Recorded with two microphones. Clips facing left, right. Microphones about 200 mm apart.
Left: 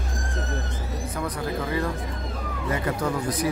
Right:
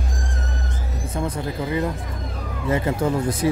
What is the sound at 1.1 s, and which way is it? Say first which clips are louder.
Speech: right 3 dB; 25° right (ahead or behind).